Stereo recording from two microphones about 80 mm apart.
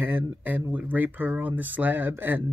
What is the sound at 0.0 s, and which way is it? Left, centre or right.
Speech, right.